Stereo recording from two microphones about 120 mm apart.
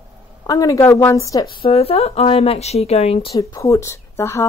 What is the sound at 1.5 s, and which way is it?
Speech, 50° left (ahead or behind).